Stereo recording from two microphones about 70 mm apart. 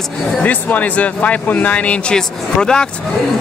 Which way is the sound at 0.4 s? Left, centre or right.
Left.